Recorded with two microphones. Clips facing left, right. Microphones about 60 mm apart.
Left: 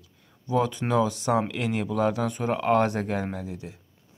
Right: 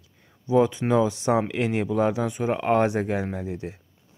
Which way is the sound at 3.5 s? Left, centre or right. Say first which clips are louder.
Right 5 dB; right.